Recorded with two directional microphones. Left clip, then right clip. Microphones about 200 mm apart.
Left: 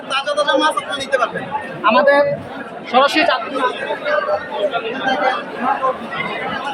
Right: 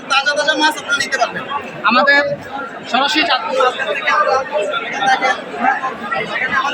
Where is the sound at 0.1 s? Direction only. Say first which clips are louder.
Right 2 dB; 15° left (ahead or behind).